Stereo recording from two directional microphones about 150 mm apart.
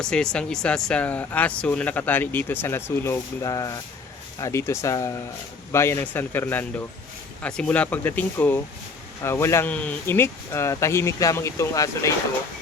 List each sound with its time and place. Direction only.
0.0 s speech: 5° left (ahead or behind); by 12.1 s 20° left (ahead or behind)